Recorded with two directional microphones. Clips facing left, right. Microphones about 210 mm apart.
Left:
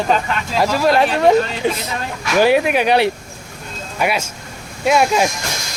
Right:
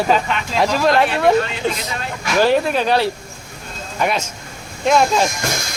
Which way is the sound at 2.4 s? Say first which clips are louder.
Left 2 dB; 15° left (ahead or behind).